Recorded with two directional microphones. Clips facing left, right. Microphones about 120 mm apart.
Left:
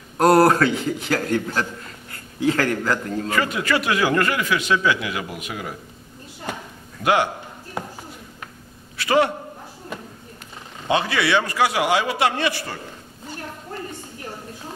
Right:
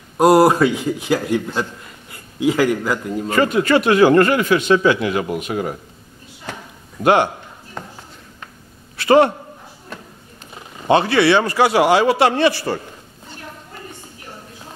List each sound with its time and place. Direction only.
0.2 s a man's voice: 10° right (ahead or behind)
3.3 s a man's voice: 30° right (ahead or behind)
7.0 s a man's voice: 35° right (ahead or behind)
7.8 s a sound: 10° left (ahead or behind)
9.0 s a man's voice: 35° right (ahead or behind)
10.9 s a man's voice: 35° right (ahead or behind)